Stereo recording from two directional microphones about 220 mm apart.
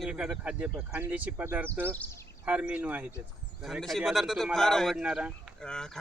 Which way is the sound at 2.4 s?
5° right (ahead or behind).